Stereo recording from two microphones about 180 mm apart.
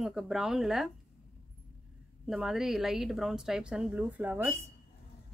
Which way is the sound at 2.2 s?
Centre (ahead or behind).